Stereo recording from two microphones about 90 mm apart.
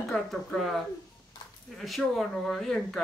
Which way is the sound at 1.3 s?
55° left (ahead or behind).